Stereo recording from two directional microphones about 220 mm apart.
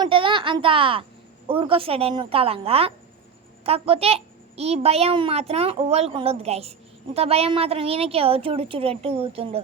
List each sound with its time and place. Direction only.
0.0 s a child's voice: 25° right (ahead or behind)